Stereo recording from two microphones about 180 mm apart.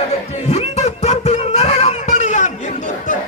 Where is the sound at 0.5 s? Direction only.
40° left (ahead or behind).